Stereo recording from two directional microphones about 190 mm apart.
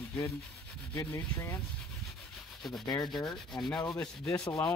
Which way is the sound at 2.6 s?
Centre (ahead or behind).